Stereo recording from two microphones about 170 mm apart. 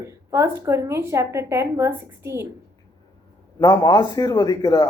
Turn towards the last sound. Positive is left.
turn(degrees=20)  # may be behind; listen again after turning